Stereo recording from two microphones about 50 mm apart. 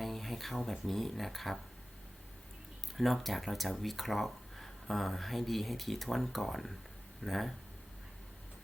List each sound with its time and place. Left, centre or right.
0.0 s speech: centre
3.0 s speech: centre